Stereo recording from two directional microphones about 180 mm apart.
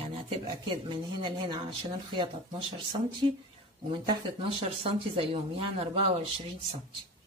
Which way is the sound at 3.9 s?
25° right (ahead or behind).